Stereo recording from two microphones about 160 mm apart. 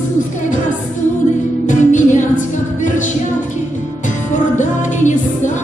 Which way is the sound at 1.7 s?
50° left (ahead or behind).